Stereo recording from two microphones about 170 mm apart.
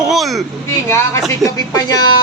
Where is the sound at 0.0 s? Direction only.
Centre (ahead or behind).